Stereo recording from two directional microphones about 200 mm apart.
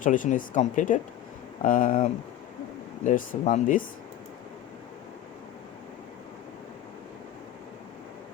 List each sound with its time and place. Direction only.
0.0 s speech: 40° left (ahead or behind)